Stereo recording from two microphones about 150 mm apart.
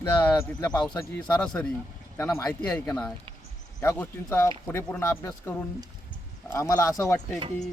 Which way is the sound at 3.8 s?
15° left (ahead or behind).